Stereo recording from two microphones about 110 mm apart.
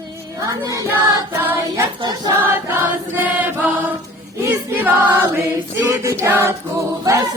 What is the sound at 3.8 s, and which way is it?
Choir, 20° right (ahead or behind).